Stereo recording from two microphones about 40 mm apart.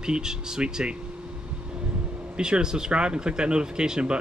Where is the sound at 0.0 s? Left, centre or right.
Centre.